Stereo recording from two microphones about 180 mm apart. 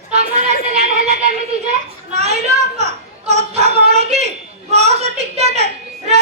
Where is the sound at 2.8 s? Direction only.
40° right (ahead or behind).